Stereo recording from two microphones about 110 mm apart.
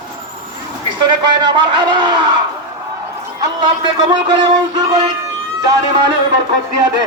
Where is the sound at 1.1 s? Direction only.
45° right (ahead or behind).